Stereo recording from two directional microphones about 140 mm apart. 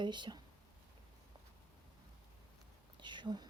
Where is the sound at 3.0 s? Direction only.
35° right (ahead or behind).